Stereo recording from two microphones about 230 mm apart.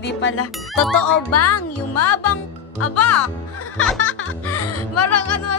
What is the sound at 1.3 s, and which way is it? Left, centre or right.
Speech, left.